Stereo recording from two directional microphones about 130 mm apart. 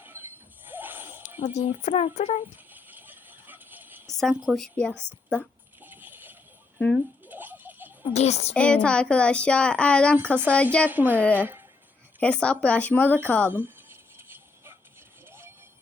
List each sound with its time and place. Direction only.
0.0 s a sound: 15° right (ahead or behind)
1.4 s speech: 60° left (ahead or behind)
2.7 s a sound: 15° right (ahead or behind)
4.4 s a woman's voice: 5° left (ahead or behind)
5.8 s boat: 15° right (ahead or behind)
6.7 s speech: 5° left (ahead or behind)
7.3 s a sound: 15° right (ahead or behind)
8.1 s speech: 55° left (ahead or behind)
8.5 s a woman's voice: 10° left (ahead or behind)
10.8 s a woman's voice: 15° right (ahead or behind)
11.2 s a woman's voice: 10° left (ahead or behind)
13.5 s a sound: 15° right (ahead or behind)